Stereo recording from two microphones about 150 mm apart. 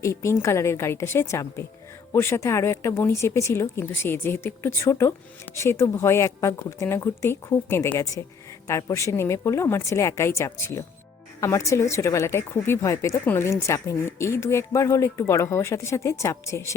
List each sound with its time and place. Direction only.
0.0 s speech: 20° left (ahead or behind)